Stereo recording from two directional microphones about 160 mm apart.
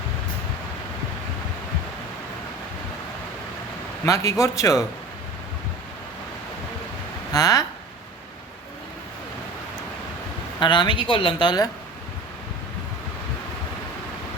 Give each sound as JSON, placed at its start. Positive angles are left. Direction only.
{"t": 4.0, "sound": "speech", "side_deg": 20}
{"t": 7.3, "sound": "speech", "side_deg": 20}
{"t": 10.6, "sound": "speech", "side_deg": 30}